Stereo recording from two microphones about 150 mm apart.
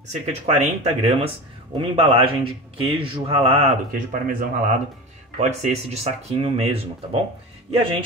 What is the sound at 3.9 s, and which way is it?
Speech, 65° right (ahead or behind).